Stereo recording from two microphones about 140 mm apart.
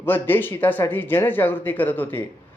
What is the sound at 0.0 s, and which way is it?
A man's voice, 15° left (ahead or behind).